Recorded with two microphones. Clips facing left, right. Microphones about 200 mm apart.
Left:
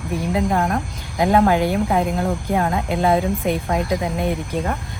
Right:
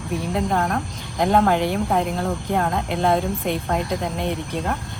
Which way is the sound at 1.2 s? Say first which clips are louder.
Left 2 dB; 5° left (ahead or behind).